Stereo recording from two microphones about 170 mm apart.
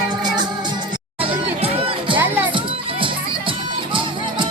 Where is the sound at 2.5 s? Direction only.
30° right (ahead or behind).